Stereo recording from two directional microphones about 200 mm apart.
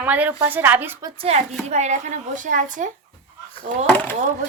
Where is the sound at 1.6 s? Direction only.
35° right (ahead or behind).